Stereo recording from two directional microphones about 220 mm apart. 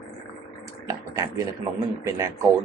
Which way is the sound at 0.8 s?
15° right (ahead or behind).